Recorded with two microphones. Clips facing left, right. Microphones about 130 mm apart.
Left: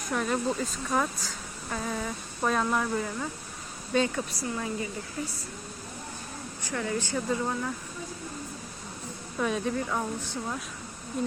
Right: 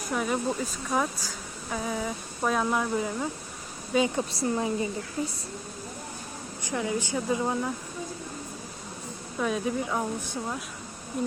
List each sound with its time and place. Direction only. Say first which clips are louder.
0.1 s speech: even; 10° right (ahead or behind)
4.1 s speech: right 5 dB; 30° right (ahead or behind)
6.7 s speech: right 2 dB; 15° right (ahead or behind)
9.4 s speech: right 1 dB; centre (ahead or behind)
9.7 s speech: right 1 dB; 10° right (ahead or behind)